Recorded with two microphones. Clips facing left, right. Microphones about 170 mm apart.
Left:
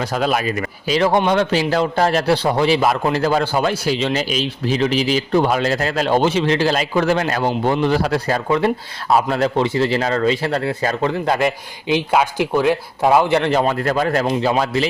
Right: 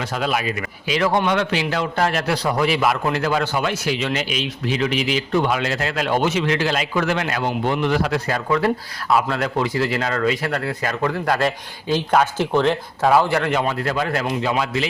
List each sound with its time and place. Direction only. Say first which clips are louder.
0.0 s a man's voice: left 4 dB; 40° left (ahead or behind); by 13.5 s 20° left (ahead or behind)
13.5 s a man's voice: left 4 dB; 40° left (ahead or behind)